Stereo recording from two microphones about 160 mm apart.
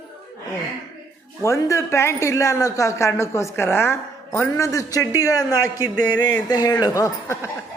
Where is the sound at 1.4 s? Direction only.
15° left (ahead or behind).